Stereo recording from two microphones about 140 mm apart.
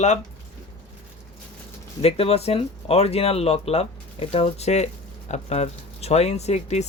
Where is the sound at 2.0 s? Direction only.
45° left (ahead or behind).